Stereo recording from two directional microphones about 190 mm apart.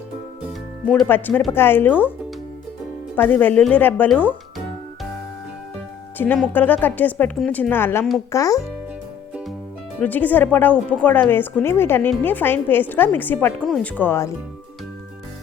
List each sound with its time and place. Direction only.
0.9 s a woman's voice: 10° left (ahead or behind)
3.2 s a woman's voice: 10° left (ahead or behind)
6.1 s a woman's voice: 10° left (ahead or behind)
10.0 s a woman's voice: 10° left (ahead or behind)